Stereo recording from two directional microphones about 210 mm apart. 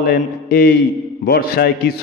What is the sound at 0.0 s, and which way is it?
A man's voice, 45° left (ahead or behind).